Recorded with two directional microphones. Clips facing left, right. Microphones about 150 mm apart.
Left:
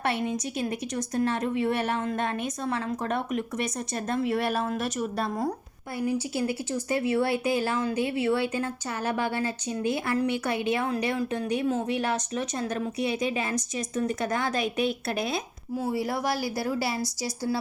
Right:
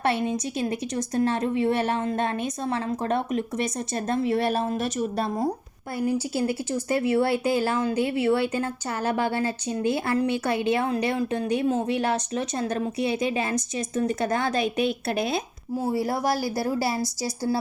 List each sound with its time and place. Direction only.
0.0 s speech: 30° right (ahead or behind)